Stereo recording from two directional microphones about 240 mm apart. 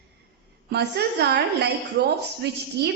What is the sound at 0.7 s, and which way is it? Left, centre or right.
A woman's voice, right.